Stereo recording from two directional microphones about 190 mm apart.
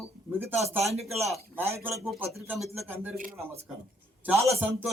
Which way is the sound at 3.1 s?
45° right (ahead or behind).